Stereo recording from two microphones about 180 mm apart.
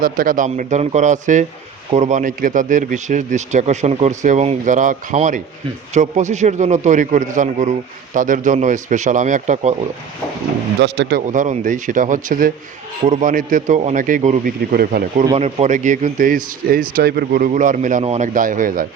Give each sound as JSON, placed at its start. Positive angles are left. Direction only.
{"t": 0.0, "sound": "a man's voice", "side_deg": -50}
{"t": 10.8, "sound": "speech", "side_deg": -75}
{"t": 11.3, "sound": "a man's voice", "side_deg": -45}
{"t": 15.4, "sound": "a man's voice", "side_deg": -35}